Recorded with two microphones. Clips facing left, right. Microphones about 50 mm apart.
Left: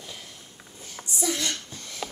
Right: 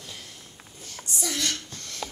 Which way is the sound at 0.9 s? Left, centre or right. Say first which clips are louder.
Left 3 dB; centre.